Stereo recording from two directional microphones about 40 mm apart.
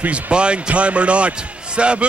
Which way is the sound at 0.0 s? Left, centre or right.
Right.